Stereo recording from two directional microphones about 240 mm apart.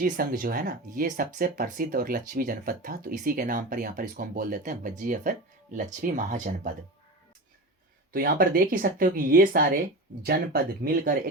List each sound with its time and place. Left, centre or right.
0.0 s speech: right
8.1 s speech: right